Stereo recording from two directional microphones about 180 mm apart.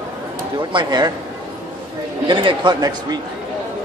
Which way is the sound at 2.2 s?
25° right (ahead or behind).